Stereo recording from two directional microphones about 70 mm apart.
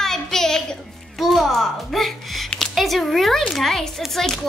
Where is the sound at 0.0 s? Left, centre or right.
Centre.